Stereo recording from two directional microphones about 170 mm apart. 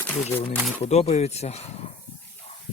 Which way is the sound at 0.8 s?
40° left (ahead or behind).